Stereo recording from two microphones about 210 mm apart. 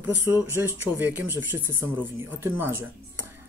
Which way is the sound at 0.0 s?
10° right (ahead or behind).